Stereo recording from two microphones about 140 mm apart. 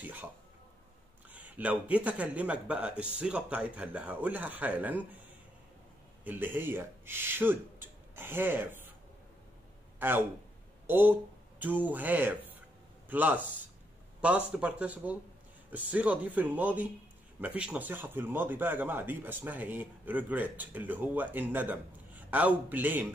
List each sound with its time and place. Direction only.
0.0 s speech: 10° right (ahead or behind)
1.3 s speech: 10° right (ahead or behind)
6.2 s speech: 15° right (ahead or behind)
9.9 s speech: 15° right (ahead or behind)